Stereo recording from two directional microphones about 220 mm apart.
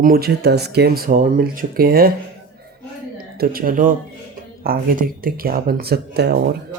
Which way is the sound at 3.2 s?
45° right (ahead or behind).